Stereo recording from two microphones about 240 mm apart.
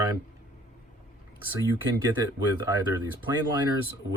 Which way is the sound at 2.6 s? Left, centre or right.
Centre.